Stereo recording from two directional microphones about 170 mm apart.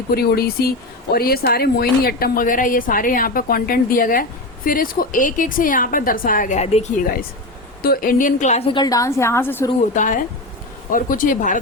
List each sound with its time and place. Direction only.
0.1 s a woman's voice: 65° left (ahead or behind); by 6.8 s 45° left (ahead or behind)
7.8 s a woman's voice: 60° left (ahead or behind); by 9.6 s 15° left (ahead or behind)
9.9 s speech: 50° left (ahead or behind)